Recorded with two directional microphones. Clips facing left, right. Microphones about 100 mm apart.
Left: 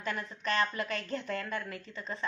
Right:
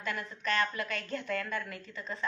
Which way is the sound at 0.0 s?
30° left (ahead or behind).